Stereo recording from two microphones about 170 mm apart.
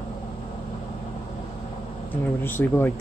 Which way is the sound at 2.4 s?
10° left (ahead or behind).